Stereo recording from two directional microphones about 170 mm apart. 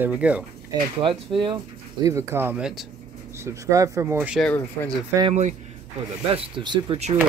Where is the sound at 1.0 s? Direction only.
30° right (ahead or behind).